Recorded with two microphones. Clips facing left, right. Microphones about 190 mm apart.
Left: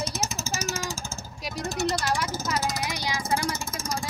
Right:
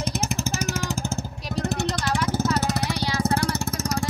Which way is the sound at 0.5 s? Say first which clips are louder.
Right 4 dB; 60° right (ahead or behind).